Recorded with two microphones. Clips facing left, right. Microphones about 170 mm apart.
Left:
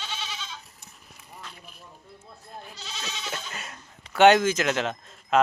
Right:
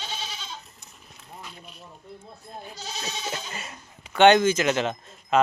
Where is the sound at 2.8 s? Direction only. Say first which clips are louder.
Right 4 dB; 40° right (ahead or behind).